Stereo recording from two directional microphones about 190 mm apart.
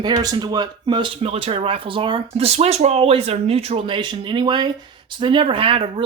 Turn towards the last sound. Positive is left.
turn(degrees=-30)  # may be behind; listen again after turning